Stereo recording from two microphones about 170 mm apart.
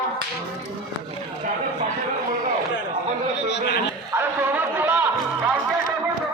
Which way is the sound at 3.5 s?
90° left.